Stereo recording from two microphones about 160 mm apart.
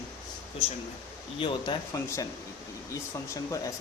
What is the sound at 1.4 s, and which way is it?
Speech, 30° left (ahead or behind).